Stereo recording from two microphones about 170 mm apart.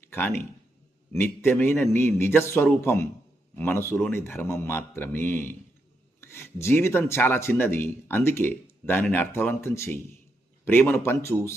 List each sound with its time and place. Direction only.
0.1 s speech: 15° left (ahead or behind)